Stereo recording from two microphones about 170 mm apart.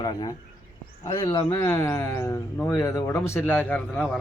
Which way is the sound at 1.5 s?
20° left (ahead or behind).